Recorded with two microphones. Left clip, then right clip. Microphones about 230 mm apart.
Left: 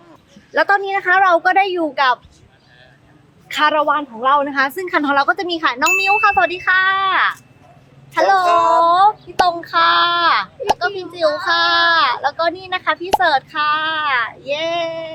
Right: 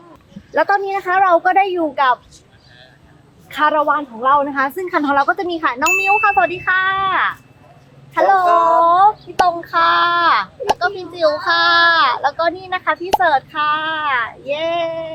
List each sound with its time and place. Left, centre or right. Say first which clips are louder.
0.5 s a woman's voice: even; centre
3.5 s a woman's voice: even; centre
8.4 s a child's voice: right 1 dB; centre
8.8 s speech: right 1 dB; centre